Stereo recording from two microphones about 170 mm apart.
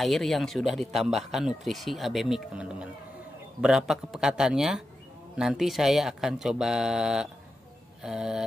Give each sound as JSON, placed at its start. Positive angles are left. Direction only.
{"t": 0.0, "sound": "a man's voice", "side_deg": 0}